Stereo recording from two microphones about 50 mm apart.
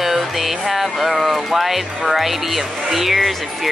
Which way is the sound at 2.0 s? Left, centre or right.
Centre.